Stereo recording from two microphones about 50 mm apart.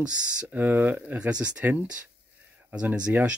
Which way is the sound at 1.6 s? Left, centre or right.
Right.